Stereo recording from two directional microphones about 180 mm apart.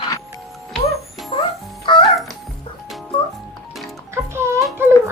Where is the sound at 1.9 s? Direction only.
25° left (ahead or behind).